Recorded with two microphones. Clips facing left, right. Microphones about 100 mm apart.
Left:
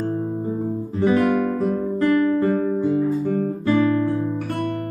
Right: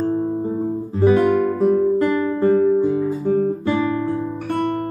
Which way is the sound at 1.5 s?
10° right (ahead or behind).